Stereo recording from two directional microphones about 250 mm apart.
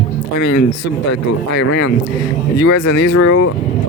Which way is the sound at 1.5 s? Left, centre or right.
Left.